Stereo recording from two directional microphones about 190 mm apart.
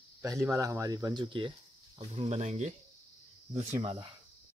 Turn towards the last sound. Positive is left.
turn(degrees=-25)  # may be behind; listen again after turning